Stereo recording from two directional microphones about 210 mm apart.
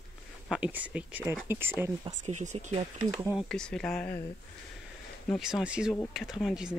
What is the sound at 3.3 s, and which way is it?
Speech, 5° left (ahead or behind).